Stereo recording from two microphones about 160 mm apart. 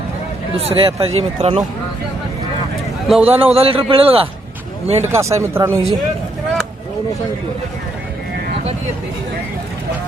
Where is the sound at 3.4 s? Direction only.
35° right (ahead or behind).